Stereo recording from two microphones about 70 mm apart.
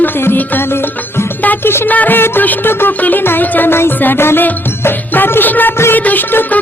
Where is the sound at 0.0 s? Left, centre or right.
Left.